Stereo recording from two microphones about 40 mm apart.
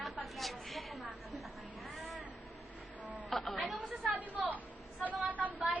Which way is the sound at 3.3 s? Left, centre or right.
Centre.